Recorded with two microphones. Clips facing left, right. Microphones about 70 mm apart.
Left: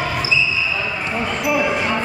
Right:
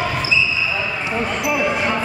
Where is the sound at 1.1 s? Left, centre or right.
Centre.